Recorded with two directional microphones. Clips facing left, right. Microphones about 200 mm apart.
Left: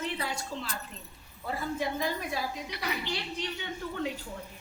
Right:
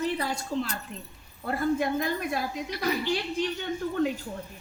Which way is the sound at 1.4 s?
55° right (ahead or behind).